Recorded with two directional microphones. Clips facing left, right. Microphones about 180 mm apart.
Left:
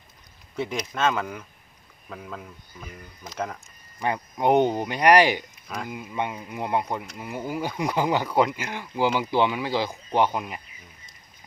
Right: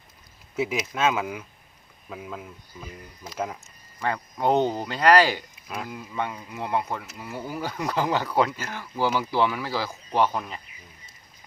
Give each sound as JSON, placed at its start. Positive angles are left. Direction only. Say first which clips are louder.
{"t": 0.5, "sound": "speech", "louder": "right 2 dB", "side_deg": -5}
{"t": 4.0, "sound": "speech", "louder": "left 1 dB", "side_deg": 15}
{"t": 5.6, "sound": "speech", "louder": "right 1 dB", "side_deg": -5}
{"t": 5.9, "sound": "speech", "louder": "left 2 dB", "side_deg": 20}